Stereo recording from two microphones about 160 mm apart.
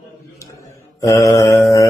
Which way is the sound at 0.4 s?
20° left (ahead or behind).